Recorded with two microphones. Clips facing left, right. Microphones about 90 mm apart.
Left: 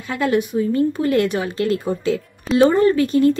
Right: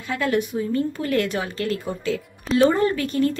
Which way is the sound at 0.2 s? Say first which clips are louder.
Left 5 dB; 20° left (ahead or behind).